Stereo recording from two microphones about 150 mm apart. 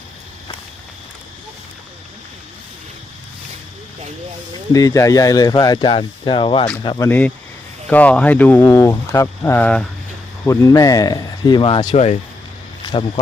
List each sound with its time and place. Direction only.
4.7 s speech: 25° left (ahead or behind)
7.1 s speech: 10° left (ahead or behind); by 13.1 s 35° left (ahead or behind)